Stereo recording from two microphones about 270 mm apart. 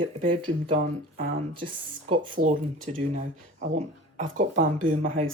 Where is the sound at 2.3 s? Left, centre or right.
Right.